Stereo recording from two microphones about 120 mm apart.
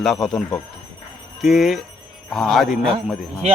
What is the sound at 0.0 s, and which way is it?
A man's voice, centre (ahead or behind).